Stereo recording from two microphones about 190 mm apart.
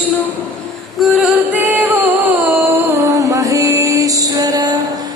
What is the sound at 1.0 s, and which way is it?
Music, centre (ahead or behind).